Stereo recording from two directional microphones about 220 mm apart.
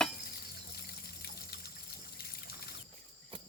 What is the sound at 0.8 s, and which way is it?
Water, 45° left (ahead or behind).